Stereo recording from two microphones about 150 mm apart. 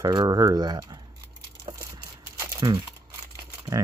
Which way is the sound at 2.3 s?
20° right (ahead or behind).